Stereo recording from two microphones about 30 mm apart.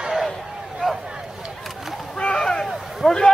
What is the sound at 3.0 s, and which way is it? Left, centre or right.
Speech, centre.